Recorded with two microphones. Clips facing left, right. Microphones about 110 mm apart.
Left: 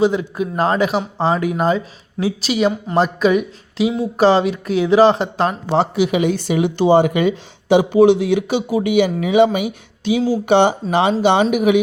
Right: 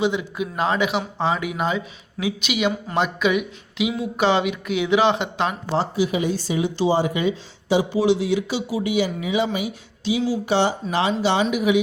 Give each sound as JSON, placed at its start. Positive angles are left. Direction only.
{"t": 0.0, "sound": "speech", "side_deg": 40}
{"t": 5.7, "sound": "speech", "side_deg": 70}